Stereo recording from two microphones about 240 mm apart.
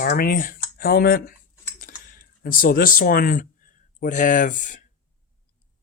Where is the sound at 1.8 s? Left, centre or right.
Left.